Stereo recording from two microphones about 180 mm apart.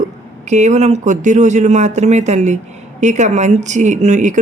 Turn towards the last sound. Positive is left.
turn(degrees=-40)  # may be behind; listen again after turning